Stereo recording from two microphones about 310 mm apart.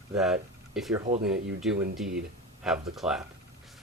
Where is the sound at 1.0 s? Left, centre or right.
Right.